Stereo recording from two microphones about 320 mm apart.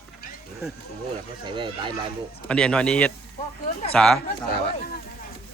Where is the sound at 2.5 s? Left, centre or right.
Centre.